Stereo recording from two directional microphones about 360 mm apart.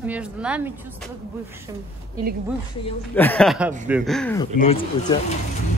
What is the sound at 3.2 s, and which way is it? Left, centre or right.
Speech, centre.